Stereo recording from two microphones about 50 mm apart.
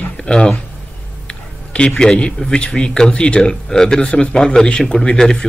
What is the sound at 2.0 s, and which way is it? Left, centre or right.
Speech, centre.